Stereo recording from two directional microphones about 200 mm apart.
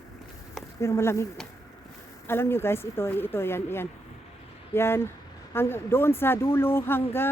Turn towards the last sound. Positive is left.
turn(degrees=10)  # may be behind; listen again after turning